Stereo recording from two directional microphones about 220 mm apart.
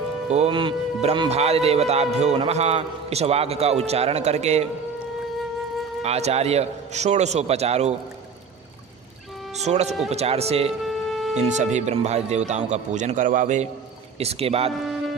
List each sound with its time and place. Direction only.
0.3 s speech: 30° right (ahead or behind)
6.0 s speech: 30° right (ahead or behind)
9.6 s speech: 30° right (ahead or behind)
10.7 s music: centre (ahead or behind)
11.3 s speech: 30° right (ahead or behind)